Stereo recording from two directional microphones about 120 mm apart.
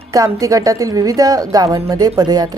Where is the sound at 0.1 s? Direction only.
30° right (ahead or behind).